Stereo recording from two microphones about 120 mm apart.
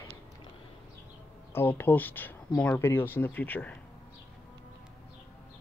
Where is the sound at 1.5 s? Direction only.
20° left (ahead or behind).